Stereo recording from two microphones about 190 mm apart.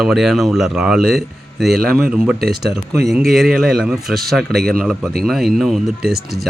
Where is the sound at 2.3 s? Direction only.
55° right (ahead or behind).